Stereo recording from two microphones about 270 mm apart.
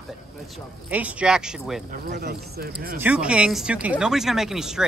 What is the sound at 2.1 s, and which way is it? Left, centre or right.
Speech, right.